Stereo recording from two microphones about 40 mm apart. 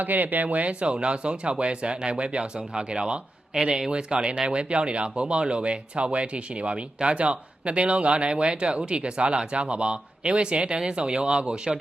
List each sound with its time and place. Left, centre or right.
0.0 s speech: right